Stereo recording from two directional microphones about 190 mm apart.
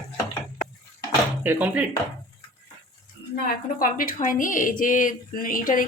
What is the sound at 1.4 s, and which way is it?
Speech, 10° right (ahead or behind).